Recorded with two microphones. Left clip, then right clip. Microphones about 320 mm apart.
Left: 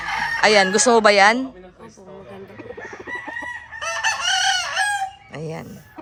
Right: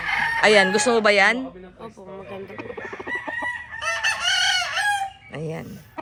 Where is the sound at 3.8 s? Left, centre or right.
Left.